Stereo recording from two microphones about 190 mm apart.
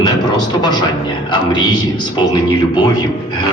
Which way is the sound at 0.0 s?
20° left (ahead or behind).